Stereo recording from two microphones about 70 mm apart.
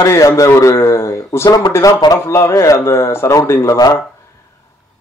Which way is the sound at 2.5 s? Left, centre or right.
Left.